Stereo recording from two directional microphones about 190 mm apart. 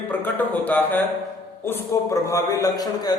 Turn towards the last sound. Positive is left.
turn(degrees=20)  # may be behind; listen again after turning